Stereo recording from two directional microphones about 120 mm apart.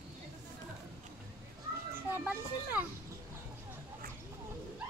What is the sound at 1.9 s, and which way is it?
Speech, 15° right (ahead or behind).